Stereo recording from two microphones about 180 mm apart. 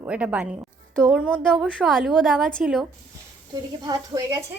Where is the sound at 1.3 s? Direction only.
5° left (ahead or behind).